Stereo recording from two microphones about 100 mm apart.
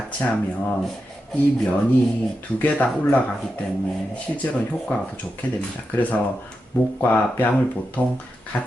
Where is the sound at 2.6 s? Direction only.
15° left (ahead or behind).